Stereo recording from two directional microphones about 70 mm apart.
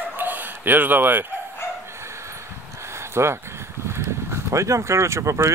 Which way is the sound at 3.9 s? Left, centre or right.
Right.